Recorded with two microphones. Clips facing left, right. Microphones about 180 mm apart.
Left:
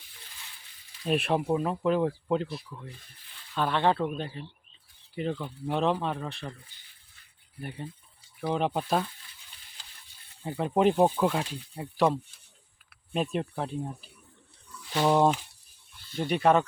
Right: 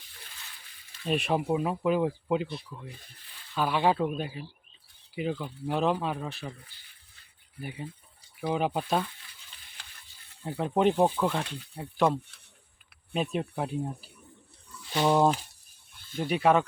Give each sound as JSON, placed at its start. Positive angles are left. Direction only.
{"t": 1.0, "sound": "speech", "side_deg": 0}
{"t": 7.6, "sound": "speech", "side_deg": -5}
{"t": 9.8, "sound": "stir", "side_deg": -65}
{"t": 10.4, "sound": "speech", "side_deg": 0}
{"t": 13.3, "sound": "speech", "side_deg": -5}